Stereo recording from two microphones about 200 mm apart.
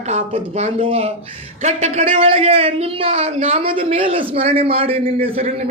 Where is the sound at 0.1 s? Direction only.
35° right (ahead or behind).